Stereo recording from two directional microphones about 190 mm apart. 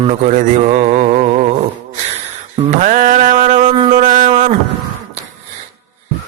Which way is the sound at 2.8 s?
45° right (ahead or behind).